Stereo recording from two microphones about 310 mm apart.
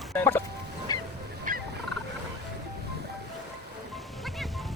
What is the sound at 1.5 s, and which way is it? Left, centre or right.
Fowl, right.